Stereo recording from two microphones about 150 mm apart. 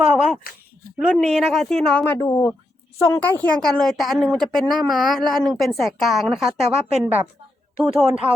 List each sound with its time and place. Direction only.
0.0 s a woman's voice: 5° right (ahead or behind)
2.1 s a woman's voice: 15° left (ahead or behind); by 8.3 s 10° right (ahead or behind)